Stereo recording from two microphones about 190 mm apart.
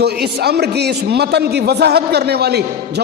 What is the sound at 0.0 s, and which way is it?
A man's voice, 60° right (ahead or behind).